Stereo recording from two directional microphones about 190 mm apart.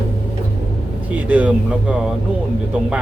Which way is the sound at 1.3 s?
5° right (ahead or behind).